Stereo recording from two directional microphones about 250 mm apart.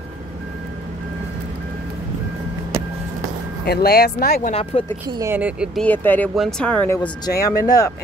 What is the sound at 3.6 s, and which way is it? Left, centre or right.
Speech, left.